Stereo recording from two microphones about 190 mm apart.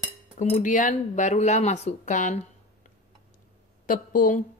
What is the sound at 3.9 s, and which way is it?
Speech, 45° left (ahead or behind).